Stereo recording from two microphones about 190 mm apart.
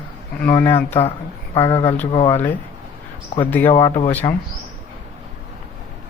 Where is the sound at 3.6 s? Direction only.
25° left (ahead or behind).